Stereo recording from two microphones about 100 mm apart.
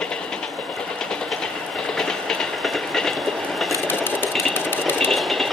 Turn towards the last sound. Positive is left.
turn(degrees=0)  # may be behind; listen again after turning